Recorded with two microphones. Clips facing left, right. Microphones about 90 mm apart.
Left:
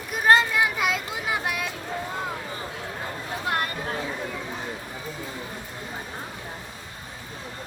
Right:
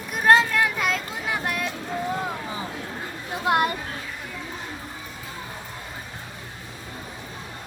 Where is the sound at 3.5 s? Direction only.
15° right (ahead or behind).